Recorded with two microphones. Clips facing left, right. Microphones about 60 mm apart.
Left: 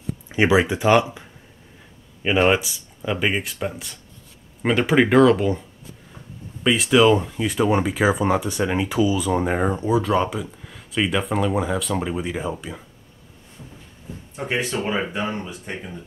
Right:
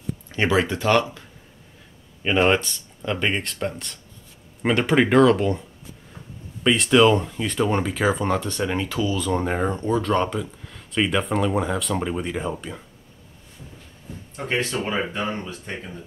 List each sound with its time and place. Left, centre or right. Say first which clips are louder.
0.3 s speech: left 3 dB; centre
2.2 s speech: left 1 dB; centre
14.3 s speech: even; centre